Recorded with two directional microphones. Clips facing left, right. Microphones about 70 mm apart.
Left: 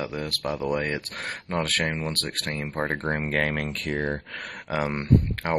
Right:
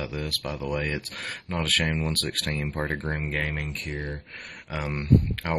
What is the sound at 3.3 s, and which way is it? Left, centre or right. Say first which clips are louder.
Speech: left 5 dB; left.